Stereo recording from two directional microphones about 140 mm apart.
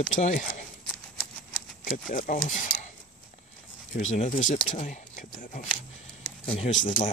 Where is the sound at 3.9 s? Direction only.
65° left (ahead or behind).